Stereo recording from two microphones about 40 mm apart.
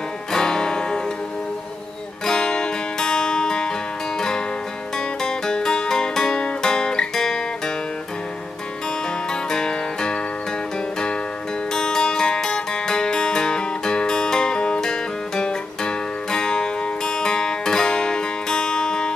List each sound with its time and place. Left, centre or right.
0.3 s music: centre
2.2 s music: centre
9.3 s music: centre
11.7 s music: centre